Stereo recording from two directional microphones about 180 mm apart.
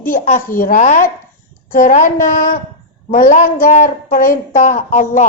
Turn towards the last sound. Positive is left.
turn(degrees=45)  # may be behind; listen again after turning